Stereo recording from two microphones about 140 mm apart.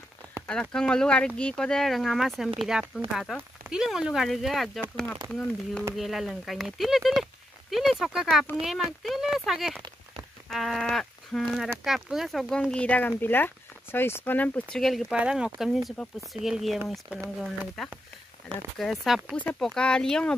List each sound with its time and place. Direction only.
0.5 s speech: 5° left (ahead or behind)
10.5 s livestock: centre (ahead or behind)
11.8 s speech: centre (ahead or behind)